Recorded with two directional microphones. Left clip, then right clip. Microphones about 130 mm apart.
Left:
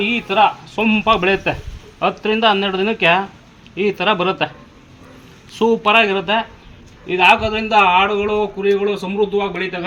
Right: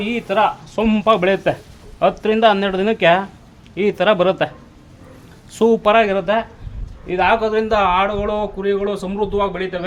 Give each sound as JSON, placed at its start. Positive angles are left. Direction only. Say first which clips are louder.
{"t": 0.1, "sound": "speech", "louder": "even", "side_deg": -45}
{"t": 5.8, "sound": "speech", "louder": "even", "side_deg": -50}